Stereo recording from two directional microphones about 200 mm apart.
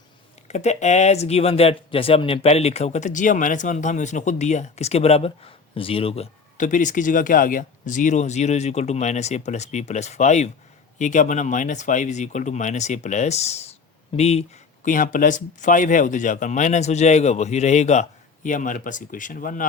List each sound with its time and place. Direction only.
0.4 s speech: 35° left (ahead or behind)
14.8 s speech: 40° left (ahead or behind)